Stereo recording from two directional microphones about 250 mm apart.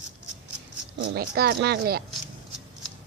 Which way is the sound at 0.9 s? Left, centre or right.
Right.